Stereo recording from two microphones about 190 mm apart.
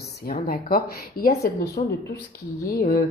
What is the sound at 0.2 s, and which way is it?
Speech, 50° left (ahead or behind).